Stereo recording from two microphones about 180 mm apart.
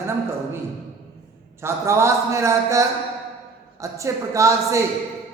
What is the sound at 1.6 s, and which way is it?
A man's voice, 15° right (ahead or behind).